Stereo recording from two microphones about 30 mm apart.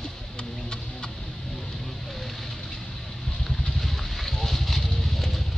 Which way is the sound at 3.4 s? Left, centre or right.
Centre.